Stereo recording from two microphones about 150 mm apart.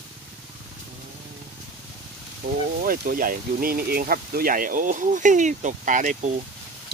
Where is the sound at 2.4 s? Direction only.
80° right; by 6.3 s 55° right (ahead or behind).